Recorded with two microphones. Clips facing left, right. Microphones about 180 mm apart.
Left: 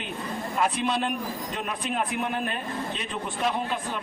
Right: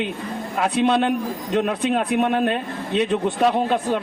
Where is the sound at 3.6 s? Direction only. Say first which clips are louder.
Right 10 dB; 70° right (ahead or behind).